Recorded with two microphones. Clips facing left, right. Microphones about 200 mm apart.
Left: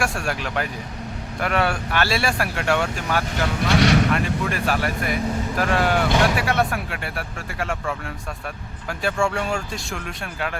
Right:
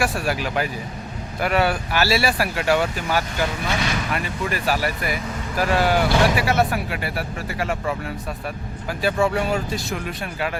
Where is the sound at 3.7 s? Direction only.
75° left (ahead or behind).